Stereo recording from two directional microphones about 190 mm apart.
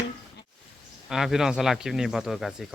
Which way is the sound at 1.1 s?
Centre (ahead or behind).